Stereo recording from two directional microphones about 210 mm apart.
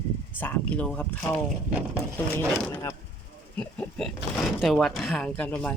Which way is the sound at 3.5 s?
5° left (ahead or behind).